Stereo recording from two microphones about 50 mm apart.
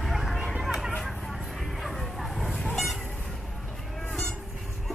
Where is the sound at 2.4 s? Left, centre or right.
Centre.